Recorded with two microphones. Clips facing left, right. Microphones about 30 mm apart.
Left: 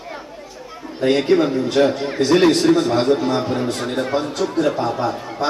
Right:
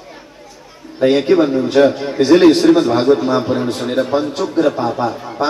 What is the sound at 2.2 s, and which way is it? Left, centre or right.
A man's voice, centre.